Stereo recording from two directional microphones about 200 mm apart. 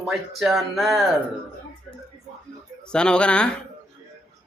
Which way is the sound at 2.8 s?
5° left (ahead or behind).